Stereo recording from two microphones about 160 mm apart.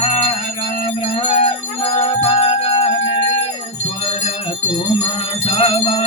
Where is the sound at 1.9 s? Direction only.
40° left (ahead or behind).